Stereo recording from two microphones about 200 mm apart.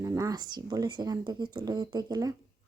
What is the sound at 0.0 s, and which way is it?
Speech, 15° right (ahead or behind).